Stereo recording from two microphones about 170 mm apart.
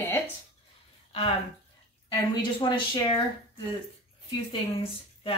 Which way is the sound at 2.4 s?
25° left (ahead or behind).